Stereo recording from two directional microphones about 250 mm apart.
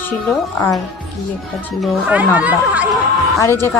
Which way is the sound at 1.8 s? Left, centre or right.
Centre.